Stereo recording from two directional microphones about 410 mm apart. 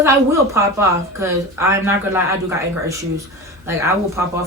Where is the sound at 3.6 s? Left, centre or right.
Centre.